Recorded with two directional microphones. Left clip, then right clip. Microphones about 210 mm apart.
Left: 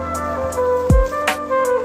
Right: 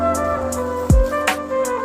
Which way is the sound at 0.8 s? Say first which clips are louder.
Left 1 dB; centre (ahead or behind).